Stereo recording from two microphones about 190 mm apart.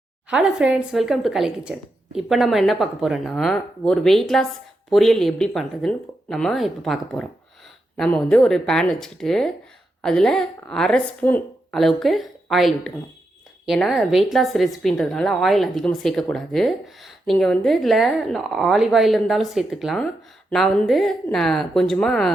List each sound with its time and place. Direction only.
0.3 s speech: 5° right (ahead or behind)